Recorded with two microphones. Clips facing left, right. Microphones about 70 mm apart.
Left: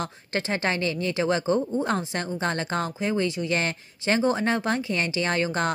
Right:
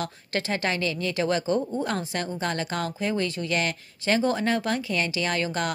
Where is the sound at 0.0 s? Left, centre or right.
Left.